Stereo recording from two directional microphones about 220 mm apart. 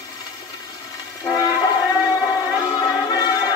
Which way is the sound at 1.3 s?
20° left (ahead or behind).